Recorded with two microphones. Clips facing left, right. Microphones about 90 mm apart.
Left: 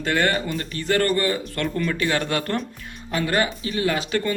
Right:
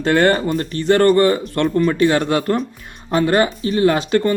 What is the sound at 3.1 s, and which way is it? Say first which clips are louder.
Speech: right 7 dB; 35° right (ahead or behind).